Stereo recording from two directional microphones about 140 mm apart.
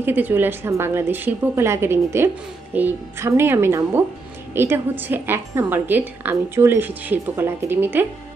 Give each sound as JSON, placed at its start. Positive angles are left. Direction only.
{"t": 0.0, "sound": "a woman's voice", "side_deg": -15}